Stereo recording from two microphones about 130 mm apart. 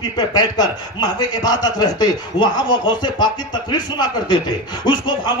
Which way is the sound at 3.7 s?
35° left (ahead or behind).